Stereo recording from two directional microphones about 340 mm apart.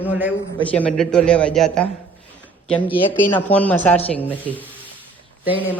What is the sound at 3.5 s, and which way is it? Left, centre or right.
A man's voice, centre.